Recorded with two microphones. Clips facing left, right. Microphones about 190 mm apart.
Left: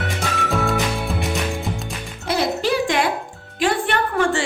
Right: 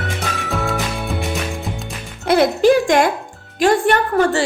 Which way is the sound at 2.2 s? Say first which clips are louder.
Right 8 dB; 55° right (ahead or behind).